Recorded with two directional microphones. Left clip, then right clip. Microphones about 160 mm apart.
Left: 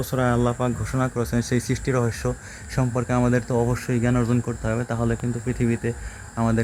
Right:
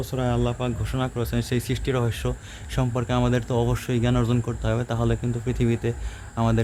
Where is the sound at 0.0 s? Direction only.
40° left (ahead or behind).